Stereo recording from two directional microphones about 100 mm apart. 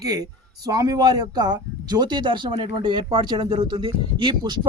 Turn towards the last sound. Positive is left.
turn(degrees=-50)  # may be behind; listen again after turning